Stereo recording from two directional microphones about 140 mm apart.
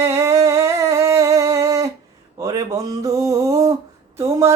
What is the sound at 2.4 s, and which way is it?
Speech, 25° right (ahead or behind).